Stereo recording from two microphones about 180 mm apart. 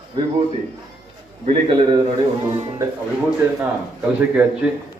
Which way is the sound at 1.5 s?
30° right (ahead or behind).